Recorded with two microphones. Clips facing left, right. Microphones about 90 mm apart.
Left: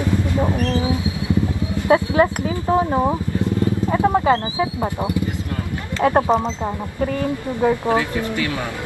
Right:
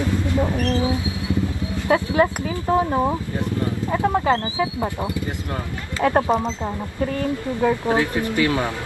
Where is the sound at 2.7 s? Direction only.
20° left (ahead or behind).